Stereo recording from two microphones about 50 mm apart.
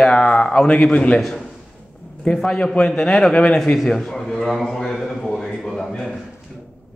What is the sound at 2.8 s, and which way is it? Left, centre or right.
Speech, centre.